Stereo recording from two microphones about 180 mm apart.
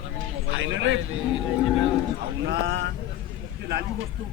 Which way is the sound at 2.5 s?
70° right (ahead or behind).